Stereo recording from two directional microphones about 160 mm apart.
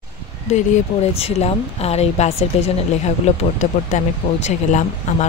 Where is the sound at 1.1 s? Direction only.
40° left (ahead or behind).